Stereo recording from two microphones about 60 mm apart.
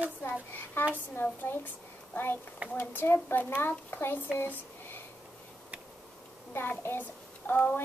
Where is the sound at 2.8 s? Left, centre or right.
Left.